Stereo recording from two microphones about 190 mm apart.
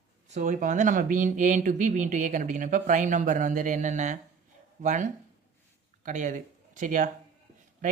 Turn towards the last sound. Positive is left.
turn(degrees=-45)  # may be behind; listen again after turning